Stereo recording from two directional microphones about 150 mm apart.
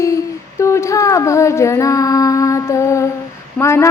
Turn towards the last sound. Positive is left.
turn(degrees=20)  # may be behind; listen again after turning